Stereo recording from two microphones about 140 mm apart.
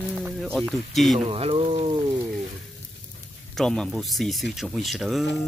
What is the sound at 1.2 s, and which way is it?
Speech, 45° right (ahead or behind).